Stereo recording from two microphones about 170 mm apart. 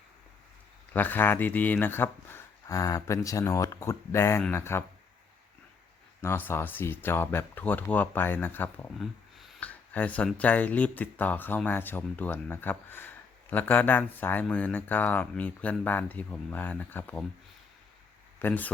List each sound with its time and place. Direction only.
0.9 s speech: 10° left (ahead or behind)
6.2 s speech: 15° left (ahead or behind)
18.3 s speech: 10° left (ahead or behind)